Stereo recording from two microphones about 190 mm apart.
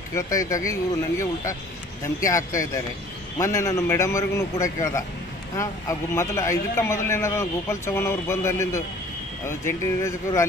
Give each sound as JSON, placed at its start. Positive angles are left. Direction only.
{"t": 0.1, "sound": "a man's voice", "side_deg": 15}